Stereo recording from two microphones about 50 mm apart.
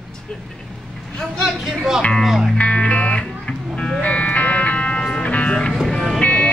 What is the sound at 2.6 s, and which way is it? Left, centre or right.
Music, left.